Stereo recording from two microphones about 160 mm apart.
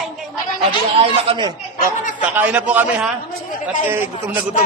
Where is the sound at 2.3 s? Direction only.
10° right (ahead or behind).